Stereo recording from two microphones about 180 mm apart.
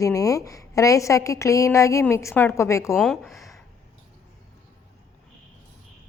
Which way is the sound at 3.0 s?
5° left (ahead or behind).